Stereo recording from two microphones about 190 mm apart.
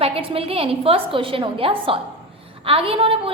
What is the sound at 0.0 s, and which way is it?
A woman's voice, 30° right (ahead or behind).